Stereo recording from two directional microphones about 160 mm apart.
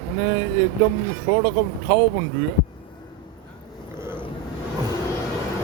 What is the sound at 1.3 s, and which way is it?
Speech, 25° right (ahead or behind).